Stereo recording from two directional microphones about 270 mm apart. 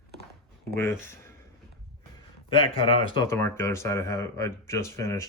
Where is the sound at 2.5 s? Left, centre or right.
Centre.